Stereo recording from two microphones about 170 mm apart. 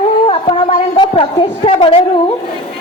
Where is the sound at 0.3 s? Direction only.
35° left (ahead or behind).